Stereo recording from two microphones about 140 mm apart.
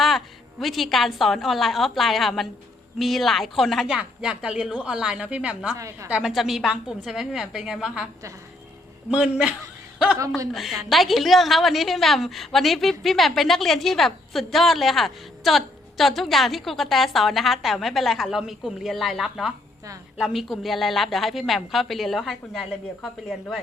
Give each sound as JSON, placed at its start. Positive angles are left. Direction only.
{"t": 0.6, "sound": "a woman's voice", "side_deg": 0}
{"t": 5.7, "sound": "a man's voice", "side_deg": -20}
{"t": 6.1, "sound": "a woman's voice", "side_deg": -5}
{"t": 10.2, "sound": "a man's voice", "side_deg": -25}
{"t": 10.5, "sound": "a woman's voice", "side_deg": 0}